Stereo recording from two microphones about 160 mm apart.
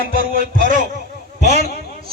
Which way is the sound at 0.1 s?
60° right (ahead or behind).